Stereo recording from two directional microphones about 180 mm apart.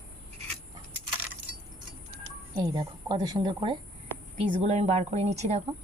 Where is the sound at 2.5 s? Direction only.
20° right (ahead or behind); by 5.6 s 40° right (ahead or behind).